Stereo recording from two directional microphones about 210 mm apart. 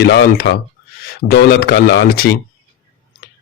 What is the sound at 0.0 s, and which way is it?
A man's voice, 50° left (ahead or behind).